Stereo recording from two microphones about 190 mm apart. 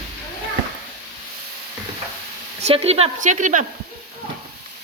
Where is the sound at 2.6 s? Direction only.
35° right (ahead or behind).